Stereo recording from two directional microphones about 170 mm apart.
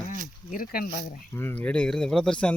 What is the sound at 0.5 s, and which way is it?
Speech, 60° left (ahead or behind).